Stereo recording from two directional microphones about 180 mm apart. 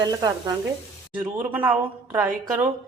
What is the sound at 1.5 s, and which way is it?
A woman's voice, 10° right (ahead or behind).